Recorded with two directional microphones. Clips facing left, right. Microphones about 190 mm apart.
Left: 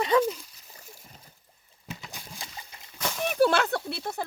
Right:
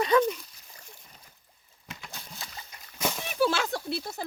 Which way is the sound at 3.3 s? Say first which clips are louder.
Left 5 dB; 55° left (ahead or behind).